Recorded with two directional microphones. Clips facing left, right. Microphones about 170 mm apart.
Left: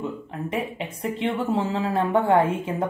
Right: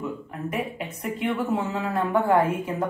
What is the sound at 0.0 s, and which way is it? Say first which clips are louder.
Speech: left 1 dB; 25° left (ahead or behind).